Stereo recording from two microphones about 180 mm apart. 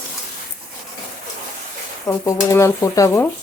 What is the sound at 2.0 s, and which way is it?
Speech, 15° left (ahead or behind).